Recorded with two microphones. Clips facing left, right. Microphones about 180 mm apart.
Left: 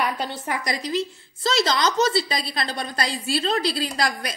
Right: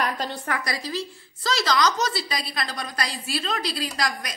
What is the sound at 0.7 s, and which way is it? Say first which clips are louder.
A woman's voice: left 4 dB; 20° left (ahead or behind).